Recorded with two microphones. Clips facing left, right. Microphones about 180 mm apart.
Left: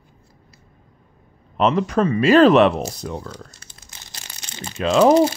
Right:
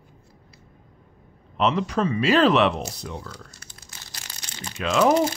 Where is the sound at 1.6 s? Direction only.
45° left (ahead or behind).